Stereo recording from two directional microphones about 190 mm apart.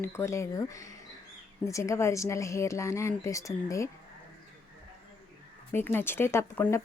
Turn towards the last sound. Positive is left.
turn(degrees=10)  # may be behind; listen again after turning